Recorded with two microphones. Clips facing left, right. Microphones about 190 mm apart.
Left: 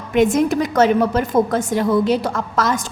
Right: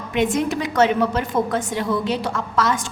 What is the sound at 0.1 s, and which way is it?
A woman's voice, 45° left (ahead or behind).